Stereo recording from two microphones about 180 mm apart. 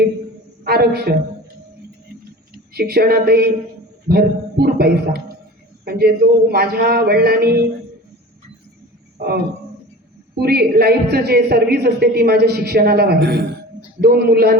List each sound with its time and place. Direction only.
0.6 s a man's voice: 60° right (ahead or behind)
2.7 s a woman's voice: 60° right (ahead or behind)
9.1 s a man's voice: 60° right (ahead or behind)